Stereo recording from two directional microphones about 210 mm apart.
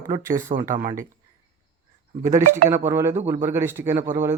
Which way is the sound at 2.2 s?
35° right (ahead or behind).